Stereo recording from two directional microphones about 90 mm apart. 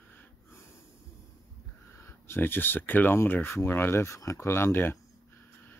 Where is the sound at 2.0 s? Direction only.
25° left (ahead or behind).